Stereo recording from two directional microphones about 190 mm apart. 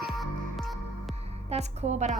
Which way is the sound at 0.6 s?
Centre (ahead or behind).